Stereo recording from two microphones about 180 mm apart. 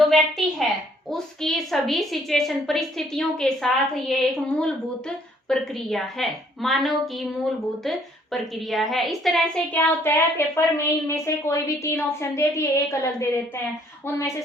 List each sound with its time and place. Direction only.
0.0 s a sound: centre (ahead or behind)
1.1 s a woman's voice: centre (ahead or behind)
10.0 s a woman's voice: 15° left (ahead or behind)